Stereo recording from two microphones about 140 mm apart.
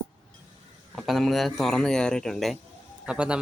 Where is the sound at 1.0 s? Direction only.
Centre (ahead or behind).